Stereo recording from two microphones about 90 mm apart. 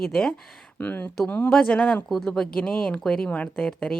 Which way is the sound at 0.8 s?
15° left (ahead or behind).